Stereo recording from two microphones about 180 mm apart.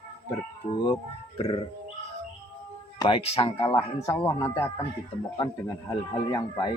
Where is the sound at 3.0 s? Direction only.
30° left (ahead or behind).